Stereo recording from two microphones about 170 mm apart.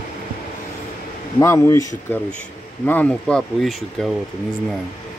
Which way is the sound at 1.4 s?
15° left (ahead or behind).